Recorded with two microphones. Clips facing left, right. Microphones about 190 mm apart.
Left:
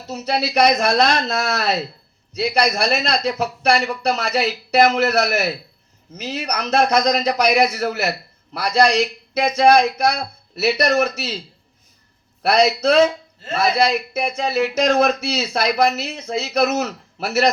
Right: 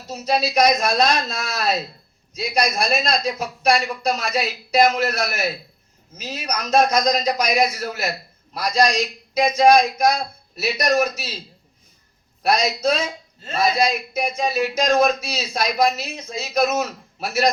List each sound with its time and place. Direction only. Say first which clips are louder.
0.1 s a man's voice: even; 65° left (ahead or behind)
12.4 s a man's voice: left 4 dB; 65° left (ahead or behind)